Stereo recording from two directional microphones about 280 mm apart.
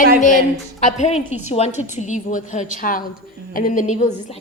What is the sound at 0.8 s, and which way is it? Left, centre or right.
A woman's voice, left.